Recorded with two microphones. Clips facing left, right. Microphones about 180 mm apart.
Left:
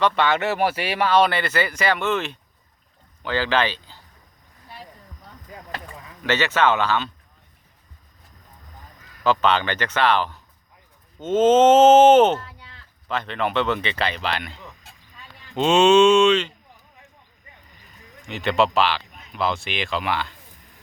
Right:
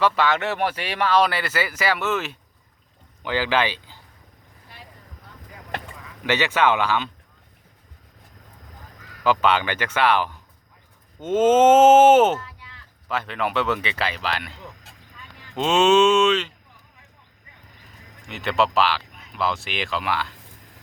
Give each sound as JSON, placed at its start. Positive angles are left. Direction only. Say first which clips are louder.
{"t": 0.0, "sound": "speech", "louder": "left 1 dB", "side_deg": 0}
{"t": 6.2, "sound": "speech", "louder": "even", "side_deg": -15}
{"t": 9.2, "sound": "speech", "louder": "even", "side_deg": -10}
{"t": 12.4, "sound": "a sound", "louder": "even", "side_deg": 30}
{"t": 13.1, "sound": "speech", "louder": "left 1 dB", "side_deg": -5}
{"t": 15.5, "sound": "speech", "louder": "left 2 dB", "side_deg": 0}
{"t": 18.3, "sound": "speech", "louder": "left 2 dB", "side_deg": 0}